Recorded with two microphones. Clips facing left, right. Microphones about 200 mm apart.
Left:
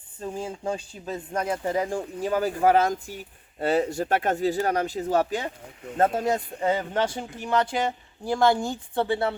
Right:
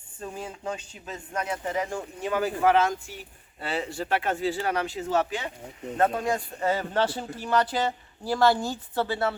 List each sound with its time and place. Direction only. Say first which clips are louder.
0.2 s speech: left 4 dB; 25° left (ahead or behind)
6.2 s speech: left 2 dB; 20° left (ahead or behind)